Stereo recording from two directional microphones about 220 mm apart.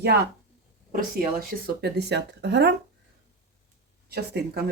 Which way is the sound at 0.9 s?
40° right (ahead or behind).